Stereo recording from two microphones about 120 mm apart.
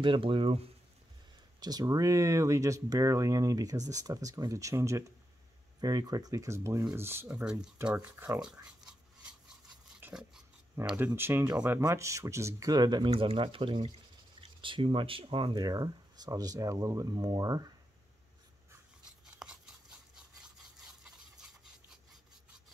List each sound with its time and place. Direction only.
0.0 s speech: 45° right (ahead or behind)
1.6 s speech: 35° right (ahead or behind)
7.4 s speech: 10° right (ahead or behind)
8.6 s a sound: 5° right (ahead or behind)
9.9 s dog: 10° right (ahead or behind)
10.8 s speech: 20° right (ahead or behind); by 15.5 s 50° right (ahead or behind)
15.5 s speech: 35° right (ahead or behind)
19.3 s toothbrush: 5° right (ahead or behind)